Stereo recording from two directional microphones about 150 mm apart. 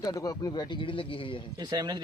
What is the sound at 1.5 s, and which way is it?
Speech, 30° right (ahead or behind).